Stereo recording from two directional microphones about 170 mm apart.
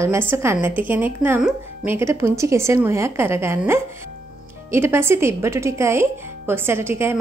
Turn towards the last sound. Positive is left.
turn(degrees=-15)  # may be behind; listen again after turning